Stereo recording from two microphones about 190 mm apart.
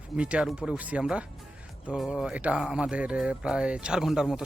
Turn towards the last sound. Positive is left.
turn(degrees=-5)  # may be behind; listen again after turning